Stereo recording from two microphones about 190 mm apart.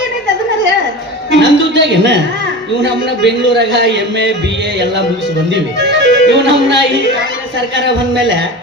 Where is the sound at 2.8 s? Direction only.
65° right (ahead or behind).